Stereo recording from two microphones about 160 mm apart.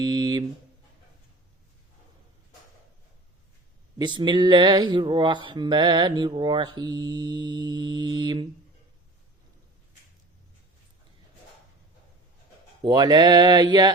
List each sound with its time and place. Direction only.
0.0 s a sound: 25° right (ahead or behind)
3.9 s speech: 30° right (ahead or behind)
12.8 s speech: 25° right (ahead or behind)